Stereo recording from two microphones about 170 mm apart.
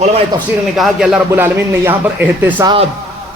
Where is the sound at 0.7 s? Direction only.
5° right (ahead or behind).